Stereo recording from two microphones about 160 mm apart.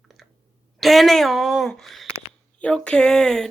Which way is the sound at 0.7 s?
Centre (ahead or behind).